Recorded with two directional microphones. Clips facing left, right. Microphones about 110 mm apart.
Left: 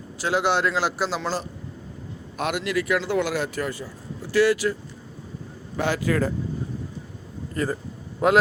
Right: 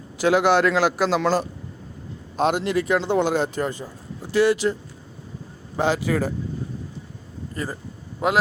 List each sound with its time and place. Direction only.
0.2 s a man's voice: 60° right (ahead or behind)
2.4 s speech: 30° right (ahead or behind)
7.5 s speech: 20° right (ahead or behind)